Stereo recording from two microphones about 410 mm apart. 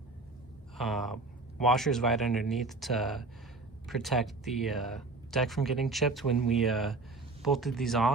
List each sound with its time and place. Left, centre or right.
0.8 s speech: centre